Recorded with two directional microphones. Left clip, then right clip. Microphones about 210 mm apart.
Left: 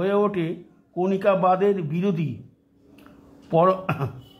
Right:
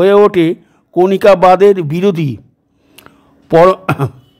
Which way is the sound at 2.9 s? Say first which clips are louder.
Right 8 dB; 45° right (ahead or behind).